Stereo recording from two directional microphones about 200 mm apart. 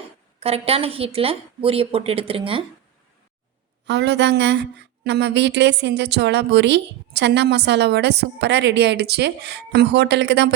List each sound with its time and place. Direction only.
0.3 s a woman's voice: 30° right (ahead or behind)
3.8 s a woman's voice: 60° right (ahead or behind)